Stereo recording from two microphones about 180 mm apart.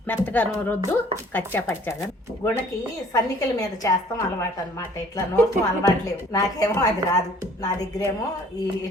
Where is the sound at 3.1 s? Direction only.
20° left (ahead or behind).